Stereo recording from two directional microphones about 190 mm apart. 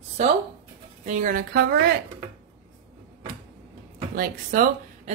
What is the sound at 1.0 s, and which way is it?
Speech, 40° right (ahead or behind).